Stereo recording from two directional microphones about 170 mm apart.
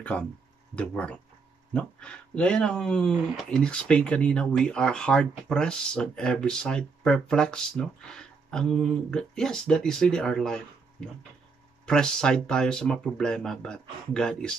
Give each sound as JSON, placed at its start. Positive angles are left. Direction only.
{"t": 0.1, "sound": "speech", "side_deg": 5}